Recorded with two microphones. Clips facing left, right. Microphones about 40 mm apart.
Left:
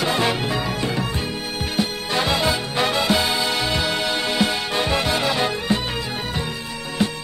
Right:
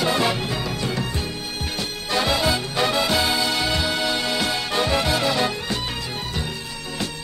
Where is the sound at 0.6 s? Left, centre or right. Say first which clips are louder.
Left 2 dB; left.